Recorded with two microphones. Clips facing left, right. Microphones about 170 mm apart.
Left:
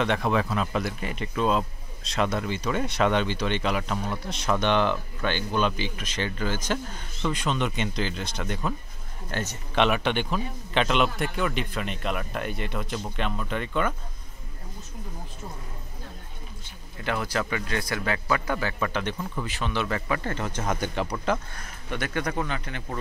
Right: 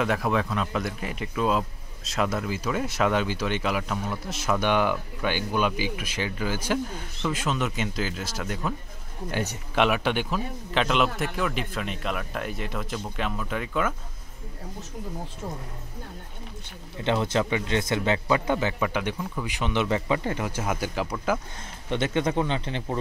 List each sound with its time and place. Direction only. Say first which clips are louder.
0.0 s a man's voice: even; 5° right (ahead or behind)
17.0 s speech: right 4 dB; 25° right (ahead or behind); by 21.4 s 5° right (ahead or behind)
21.5 s speech: right 4 dB; 25° right (ahead or behind)